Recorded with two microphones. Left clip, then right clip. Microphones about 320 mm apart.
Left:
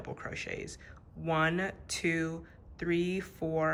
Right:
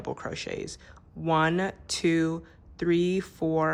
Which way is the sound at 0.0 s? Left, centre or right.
Centre.